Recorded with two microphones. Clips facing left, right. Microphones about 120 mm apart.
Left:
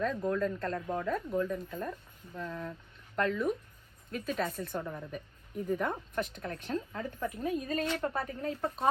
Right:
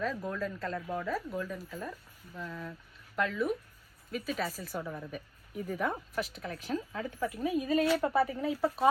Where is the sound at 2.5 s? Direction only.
20° left (ahead or behind).